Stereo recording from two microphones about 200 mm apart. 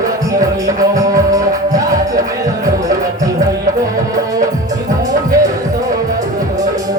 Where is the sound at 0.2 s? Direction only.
15° right (ahead or behind).